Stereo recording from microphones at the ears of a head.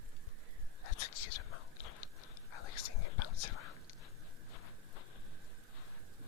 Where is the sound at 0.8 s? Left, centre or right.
Left.